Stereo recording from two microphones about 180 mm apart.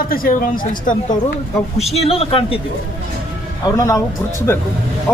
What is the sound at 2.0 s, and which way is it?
Speech, 35° left (ahead or behind).